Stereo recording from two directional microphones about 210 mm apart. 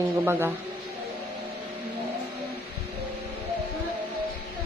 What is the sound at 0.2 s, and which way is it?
Speech, 10° right (ahead or behind).